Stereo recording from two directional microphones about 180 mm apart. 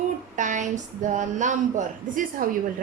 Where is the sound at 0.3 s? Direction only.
45° right (ahead or behind).